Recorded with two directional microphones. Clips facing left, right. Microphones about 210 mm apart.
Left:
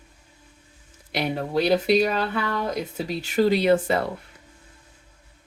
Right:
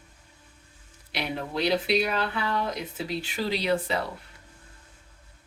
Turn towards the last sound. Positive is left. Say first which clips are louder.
# left 7 dB
turn(degrees=50)  # may be behind; listen again after turning